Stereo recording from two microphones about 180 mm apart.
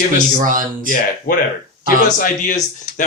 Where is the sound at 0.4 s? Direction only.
50° right (ahead or behind).